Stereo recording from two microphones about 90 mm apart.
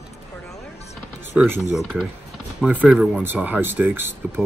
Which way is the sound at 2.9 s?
5° right (ahead or behind).